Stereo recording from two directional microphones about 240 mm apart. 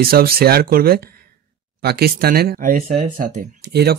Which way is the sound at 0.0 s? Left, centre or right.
Right.